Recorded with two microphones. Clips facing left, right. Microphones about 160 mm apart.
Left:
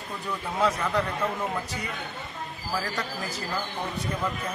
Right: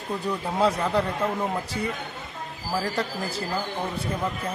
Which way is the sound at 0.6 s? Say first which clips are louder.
Right 2 dB; 30° right (ahead or behind).